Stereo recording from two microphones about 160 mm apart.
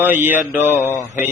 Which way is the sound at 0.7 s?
15° left (ahead or behind).